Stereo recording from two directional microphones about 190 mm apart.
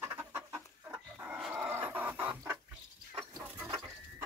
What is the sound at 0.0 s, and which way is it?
Chicken, 10° right (ahead or behind).